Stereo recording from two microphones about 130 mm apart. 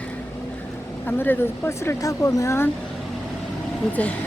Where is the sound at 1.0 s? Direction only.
15° left (ahead or behind).